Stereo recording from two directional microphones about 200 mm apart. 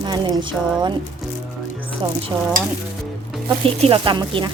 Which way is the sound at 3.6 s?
25° right (ahead or behind).